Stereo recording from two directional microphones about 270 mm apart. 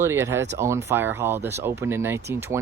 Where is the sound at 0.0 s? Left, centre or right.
Centre.